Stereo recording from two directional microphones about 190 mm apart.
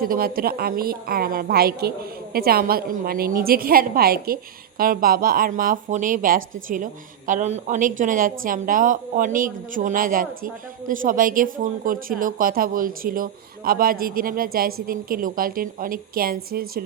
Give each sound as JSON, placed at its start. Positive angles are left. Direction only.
{"t": 0.0, "sound": "a man's voice", "side_deg": -50}